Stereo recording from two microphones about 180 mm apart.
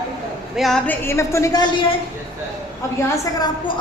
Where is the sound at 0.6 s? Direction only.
Centre (ahead or behind); by 1.7 s 20° left (ahead or behind).